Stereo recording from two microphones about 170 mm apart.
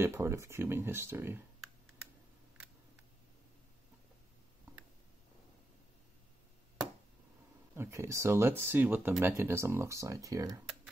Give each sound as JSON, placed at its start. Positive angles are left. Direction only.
{"t": 0.0, "sound": "speech", "side_deg": -15}
{"t": 7.7, "sound": "speech", "side_deg": -15}